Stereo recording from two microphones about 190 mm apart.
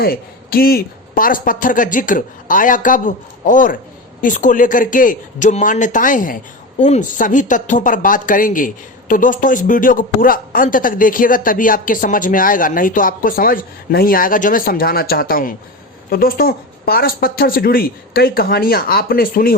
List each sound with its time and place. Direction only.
0.0 s speech: 50° left (ahead or behind)